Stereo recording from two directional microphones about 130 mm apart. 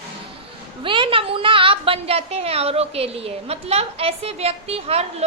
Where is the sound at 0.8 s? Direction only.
40° right (ahead or behind).